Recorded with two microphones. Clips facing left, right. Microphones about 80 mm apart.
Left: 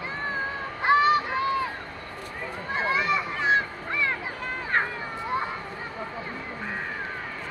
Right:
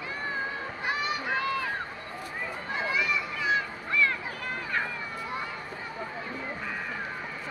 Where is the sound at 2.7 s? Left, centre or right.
Left.